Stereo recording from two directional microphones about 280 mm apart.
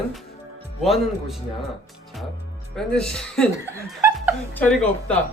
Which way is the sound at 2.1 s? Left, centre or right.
Centre.